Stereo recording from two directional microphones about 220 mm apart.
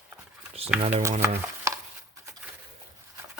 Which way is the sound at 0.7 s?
5° right (ahead or behind).